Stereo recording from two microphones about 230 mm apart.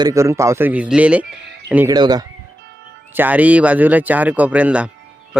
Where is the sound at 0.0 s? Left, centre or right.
Centre.